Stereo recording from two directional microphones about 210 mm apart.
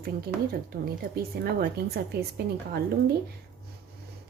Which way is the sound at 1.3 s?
45° right (ahead or behind).